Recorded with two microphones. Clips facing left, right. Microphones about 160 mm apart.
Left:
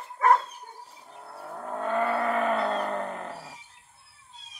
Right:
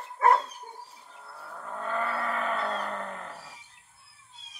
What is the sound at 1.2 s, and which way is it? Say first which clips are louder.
Vehicle: left 5 dB; 45° left (ahead or behind).